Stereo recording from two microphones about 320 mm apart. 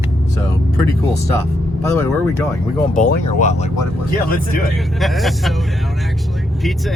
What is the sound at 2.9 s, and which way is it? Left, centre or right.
Speech, left.